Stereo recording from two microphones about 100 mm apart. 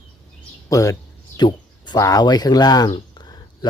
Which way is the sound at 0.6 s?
35° left (ahead or behind).